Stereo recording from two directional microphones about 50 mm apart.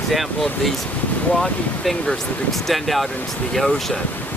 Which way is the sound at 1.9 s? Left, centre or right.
Centre.